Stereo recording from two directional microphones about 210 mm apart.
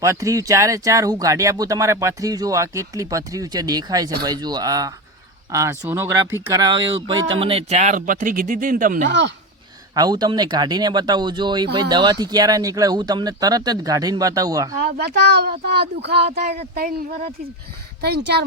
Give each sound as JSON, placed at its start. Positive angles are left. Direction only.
{"t": 0.0, "sound": "speech", "side_deg": -15}
{"t": 9.9, "sound": "speech", "side_deg": -20}
{"t": 14.8, "sound": "speech", "side_deg": -50}